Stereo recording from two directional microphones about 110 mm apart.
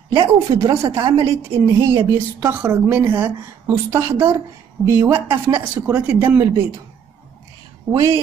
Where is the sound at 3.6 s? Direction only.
30° right (ahead or behind).